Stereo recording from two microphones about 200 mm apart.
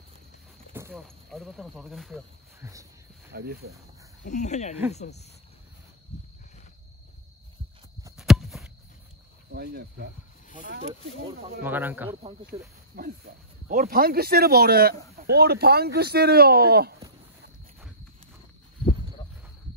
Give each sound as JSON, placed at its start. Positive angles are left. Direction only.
{"t": 0.9, "sound": "speech", "side_deg": 0}
{"t": 2.6, "sound": "speech", "side_deg": -15}
{"t": 3.3, "sound": "speech", "side_deg": -50}
{"t": 4.2, "sound": "speech", "side_deg": 35}
{"t": 8.2, "sound": "a sound", "side_deg": 0}
{"t": 9.5, "sound": "cricket", "side_deg": -55}
{"t": 11.6, "sound": "speech", "side_deg": -10}
{"t": 12.5, "sound": "speech", "side_deg": -25}
{"t": 12.9, "sound": "speech", "side_deg": -45}